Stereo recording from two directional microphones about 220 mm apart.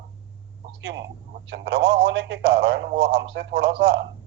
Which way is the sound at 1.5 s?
50° right (ahead or behind).